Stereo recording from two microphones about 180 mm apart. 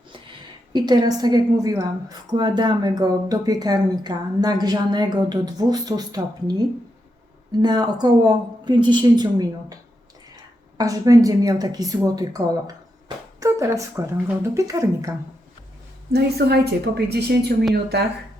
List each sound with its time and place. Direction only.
0.7 s a woman's voice: 25° right (ahead or behind)
7.6 s a woman's voice: 25° right (ahead or behind)
16.1 s a woman's voice: 65° right (ahead or behind)